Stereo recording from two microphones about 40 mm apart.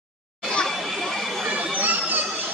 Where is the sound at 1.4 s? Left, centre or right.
Right.